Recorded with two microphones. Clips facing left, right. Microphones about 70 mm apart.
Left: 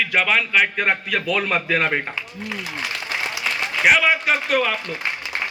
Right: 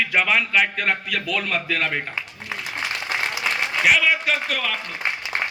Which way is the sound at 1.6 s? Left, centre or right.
Left.